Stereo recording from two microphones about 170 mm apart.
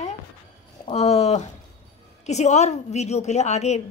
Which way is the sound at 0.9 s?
40° left (ahead or behind).